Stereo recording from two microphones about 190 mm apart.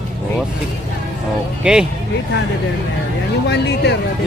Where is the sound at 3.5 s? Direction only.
65° left (ahead or behind).